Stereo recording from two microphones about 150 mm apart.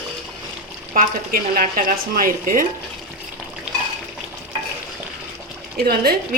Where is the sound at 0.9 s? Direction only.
65° right (ahead or behind).